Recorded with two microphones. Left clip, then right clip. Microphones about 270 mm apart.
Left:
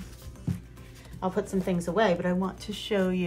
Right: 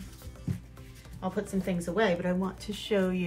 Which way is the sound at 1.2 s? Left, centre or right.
Centre.